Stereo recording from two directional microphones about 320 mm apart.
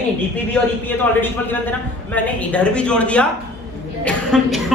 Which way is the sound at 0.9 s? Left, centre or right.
Centre.